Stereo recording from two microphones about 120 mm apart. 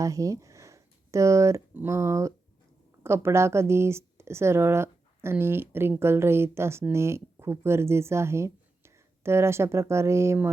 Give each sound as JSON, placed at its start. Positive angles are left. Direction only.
{"t": 0.0, "sound": "speech", "side_deg": -30}